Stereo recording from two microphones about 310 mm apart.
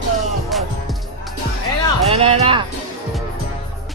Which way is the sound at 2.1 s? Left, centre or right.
Centre.